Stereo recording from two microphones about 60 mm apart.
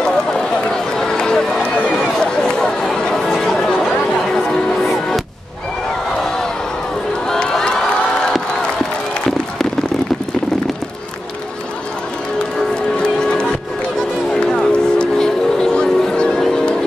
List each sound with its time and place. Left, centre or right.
0.0 s run: centre
2.0 s chatter: centre
4.3 s music: centre
7.2 s crowd: centre
12.9 s a sound: centre
14.3 s music: centre